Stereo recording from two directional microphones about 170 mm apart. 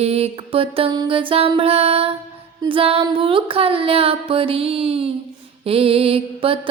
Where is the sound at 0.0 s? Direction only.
35° right (ahead or behind).